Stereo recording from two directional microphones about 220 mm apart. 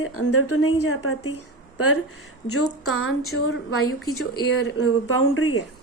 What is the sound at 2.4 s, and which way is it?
A woman's voice, 85° left.